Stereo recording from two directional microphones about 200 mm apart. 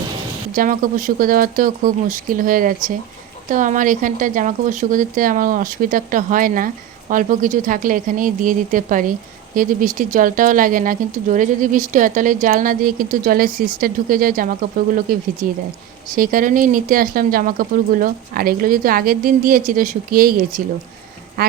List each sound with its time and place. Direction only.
0.5 s speech: 45° right (ahead or behind)